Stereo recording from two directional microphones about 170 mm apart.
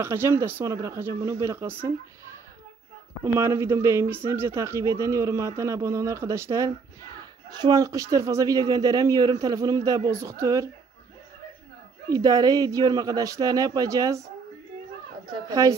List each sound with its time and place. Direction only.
0.0 s speech: 15° right (ahead or behind)
3.3 s speech: 15° right (ahead or behind)
12.1 s speech: 20° right (ahead or behind)
15.4 s speech: 20° right (ahead or behind)